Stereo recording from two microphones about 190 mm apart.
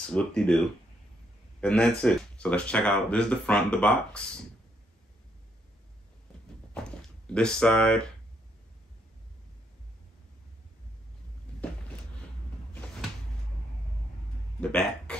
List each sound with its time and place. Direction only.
0.1 s speech: 5° left (ahead or behind)
1.6 s speech: 5° left (ahead or behind)
6.7 s door: 5° left (ahead or behind)
11.5 s a sound: 5° left (ahead or behind)
14.6 s speech: 5° left (ahead or behind)